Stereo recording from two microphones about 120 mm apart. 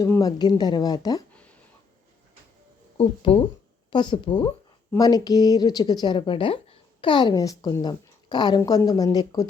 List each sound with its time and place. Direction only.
0.0 s a woman's voice: 30° left (ahead or behind)
3.0 s a woman's voice: 45° left (ahead or behind); by 9.5 s 30° left (ahead or behind)